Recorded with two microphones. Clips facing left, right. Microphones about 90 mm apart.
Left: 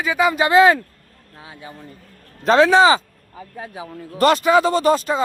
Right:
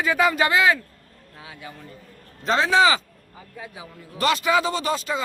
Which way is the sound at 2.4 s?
60° left (ahead or behind).